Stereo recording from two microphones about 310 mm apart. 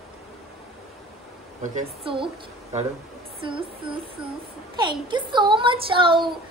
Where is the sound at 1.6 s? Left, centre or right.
Right.